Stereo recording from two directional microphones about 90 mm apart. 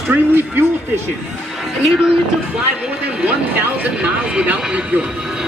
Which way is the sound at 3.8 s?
15° right (ahead or behind).